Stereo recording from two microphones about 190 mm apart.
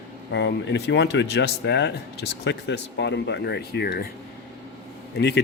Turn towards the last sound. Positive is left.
turn(degrees=60)  # may be behind; listen again after turning